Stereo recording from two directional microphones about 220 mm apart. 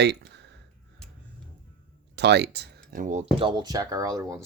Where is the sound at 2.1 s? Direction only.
50° right (ahead or behind).